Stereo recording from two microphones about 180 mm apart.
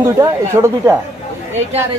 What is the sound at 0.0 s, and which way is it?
Speech, 15° right (ahead or behind).